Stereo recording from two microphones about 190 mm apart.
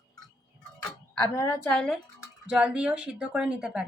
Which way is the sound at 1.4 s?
15° left (ahead or behind).